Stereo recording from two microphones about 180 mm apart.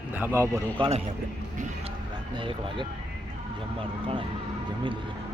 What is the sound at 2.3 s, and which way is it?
Speech, 25° right (ahead or behind).